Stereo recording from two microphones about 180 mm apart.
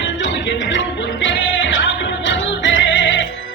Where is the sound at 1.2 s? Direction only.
90° left.